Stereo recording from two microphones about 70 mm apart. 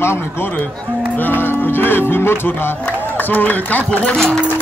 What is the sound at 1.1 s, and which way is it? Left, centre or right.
Speech, left.